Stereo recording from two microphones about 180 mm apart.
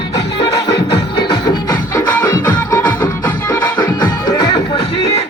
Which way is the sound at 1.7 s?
10° left (ahead or behind).